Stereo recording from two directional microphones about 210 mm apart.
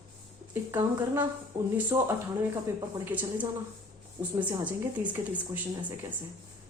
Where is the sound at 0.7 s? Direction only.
10° right (ahead or behind).